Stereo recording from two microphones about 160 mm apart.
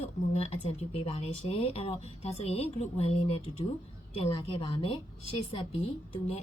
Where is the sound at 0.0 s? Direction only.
40° left (ahead or behind).